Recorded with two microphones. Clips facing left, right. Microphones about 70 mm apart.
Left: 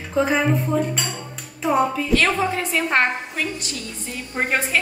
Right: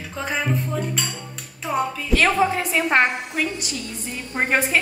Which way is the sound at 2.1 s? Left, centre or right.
Centre.